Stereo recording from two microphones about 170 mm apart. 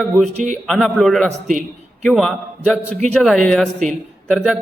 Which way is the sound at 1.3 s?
50° right (ahead or behind).